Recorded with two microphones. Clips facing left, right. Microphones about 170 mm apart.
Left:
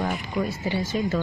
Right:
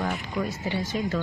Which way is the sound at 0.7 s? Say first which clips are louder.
Left 3 dB; 10° left (ahead or behind).